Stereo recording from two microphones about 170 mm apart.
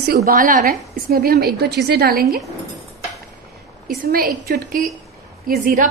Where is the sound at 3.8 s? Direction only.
60° right (ahead or behind).